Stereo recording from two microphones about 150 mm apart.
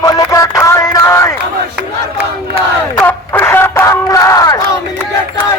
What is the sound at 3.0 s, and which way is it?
Battle cry, 10° left (ahead or behind).